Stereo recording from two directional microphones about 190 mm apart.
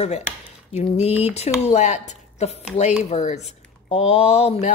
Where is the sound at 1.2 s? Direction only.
35° left (ahead or behind).